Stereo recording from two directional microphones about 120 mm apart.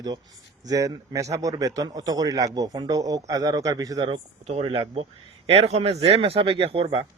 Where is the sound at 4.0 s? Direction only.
55° right (ahead or behind).